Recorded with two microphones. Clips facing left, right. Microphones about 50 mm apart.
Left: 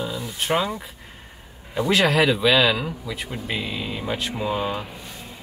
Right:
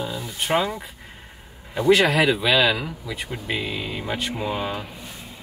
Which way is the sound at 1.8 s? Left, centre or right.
Centre.